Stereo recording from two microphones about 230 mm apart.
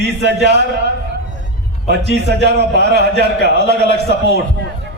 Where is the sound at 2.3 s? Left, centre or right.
Left.